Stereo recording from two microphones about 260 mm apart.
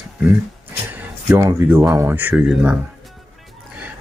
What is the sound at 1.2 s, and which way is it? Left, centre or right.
Speech, centre.